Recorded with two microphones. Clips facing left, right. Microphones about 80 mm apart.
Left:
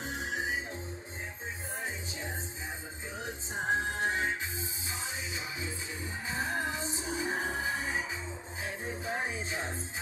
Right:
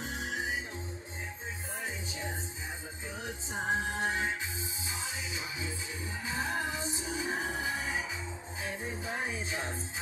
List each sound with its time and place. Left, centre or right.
0.0 s music: left
3.7 s music: left
6.2 s music: left
9.0 s music: left